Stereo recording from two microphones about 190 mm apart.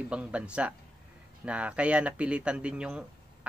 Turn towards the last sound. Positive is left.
turn(degrees=-5)  # may be behind; listen again after turning